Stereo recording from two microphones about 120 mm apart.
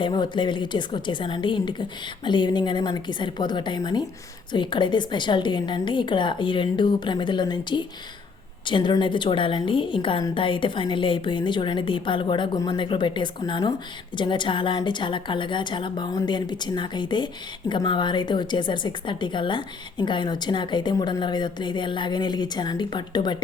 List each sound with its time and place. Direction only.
0.0 s a woman's voice: 40° left (ahead or behind)